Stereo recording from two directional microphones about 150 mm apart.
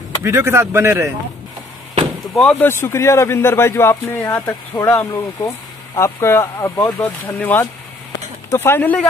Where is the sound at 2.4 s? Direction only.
10° left (ahead or behind).